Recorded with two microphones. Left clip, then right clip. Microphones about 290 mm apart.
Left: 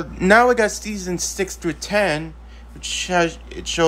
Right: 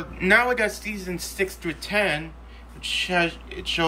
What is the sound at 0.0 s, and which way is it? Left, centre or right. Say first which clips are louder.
Speech: left 6 dB; centre.